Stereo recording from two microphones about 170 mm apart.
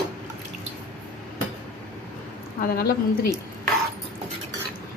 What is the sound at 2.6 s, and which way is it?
Speech, 65° left (ahead or behind).